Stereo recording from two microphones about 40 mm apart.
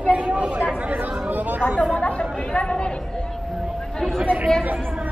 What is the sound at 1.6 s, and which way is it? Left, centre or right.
A woman's voice, centre.